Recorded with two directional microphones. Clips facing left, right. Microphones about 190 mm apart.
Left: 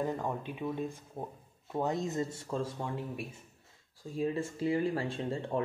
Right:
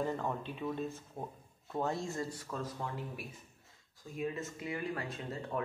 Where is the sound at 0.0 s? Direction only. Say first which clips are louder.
Left 2 dB; 10° left (ahead or behind).